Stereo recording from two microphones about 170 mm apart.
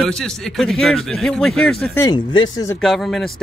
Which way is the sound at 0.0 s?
5° left (ahead or behind).